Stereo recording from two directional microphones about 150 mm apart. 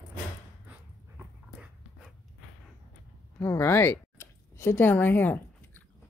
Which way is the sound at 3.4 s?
15° left (ahead or behind).